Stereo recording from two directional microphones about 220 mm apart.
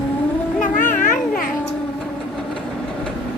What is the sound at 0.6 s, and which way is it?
Children playing, 35° left (ahead or behind).